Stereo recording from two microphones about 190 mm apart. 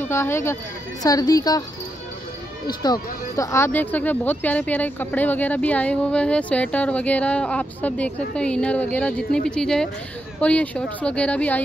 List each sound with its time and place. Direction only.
0.0 s a woman's voice: 15° left (ahead or behind)
2.6 s speech: 20° left (ahead or behind)